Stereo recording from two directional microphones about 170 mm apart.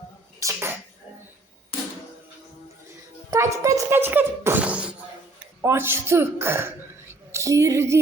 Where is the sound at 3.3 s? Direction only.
15° right (ahead or behind).